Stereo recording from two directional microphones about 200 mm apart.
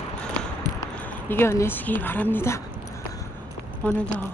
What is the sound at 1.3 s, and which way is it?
Speech, 10° left (ahead or behind).